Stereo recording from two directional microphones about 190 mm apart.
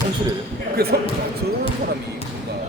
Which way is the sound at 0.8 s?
55° right (ahead or behind).